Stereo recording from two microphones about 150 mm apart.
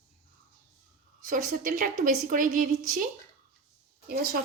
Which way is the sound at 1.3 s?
65° right (ahead or behind).